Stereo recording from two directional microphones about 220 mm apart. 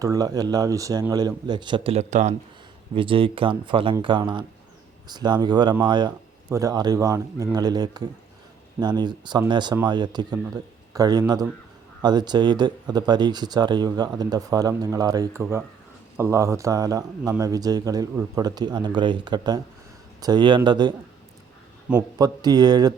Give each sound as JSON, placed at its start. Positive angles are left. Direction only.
{"t": 0.0, "sound": "speech", "side_deg": -15}